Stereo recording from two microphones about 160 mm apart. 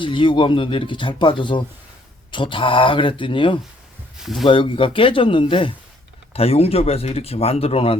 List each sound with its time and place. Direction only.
0.0 s speech: 30° left (ahead or behind)
4.2 s speech: centre (ahead or behind)
4.4 s speech: 30° left (ahead or behind)